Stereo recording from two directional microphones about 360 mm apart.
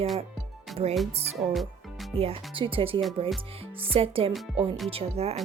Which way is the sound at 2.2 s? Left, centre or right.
Centre.